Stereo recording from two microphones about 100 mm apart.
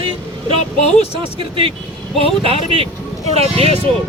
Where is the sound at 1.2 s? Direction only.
60° right (ahead or behind).